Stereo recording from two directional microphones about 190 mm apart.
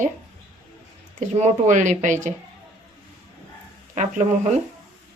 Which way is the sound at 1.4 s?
40° right (ahead or behind).